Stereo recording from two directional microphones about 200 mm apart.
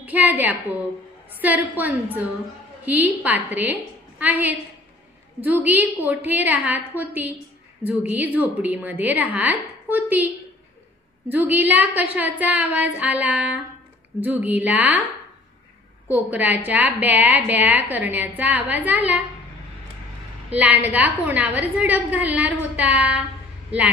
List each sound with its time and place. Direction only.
0.0 s a sound: 10° right (ahead or behind)
1.3 s a woman's voice: 10° right (ahead or behind)
16.1 s a woman's voice: 10° right (ahead or behind)
20.5 s a woman's voice: 10° right (ahead or behind)